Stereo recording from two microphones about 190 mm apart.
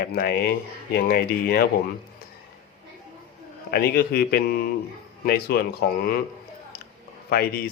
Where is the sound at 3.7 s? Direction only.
55° left (ahead or behind).